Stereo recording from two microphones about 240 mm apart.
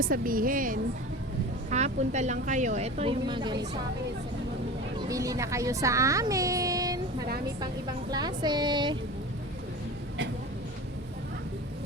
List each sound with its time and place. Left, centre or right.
0.0 s a woman's voice: right; by 3.7 s centre
4.9 s speech: centre
8.1 s speech: centre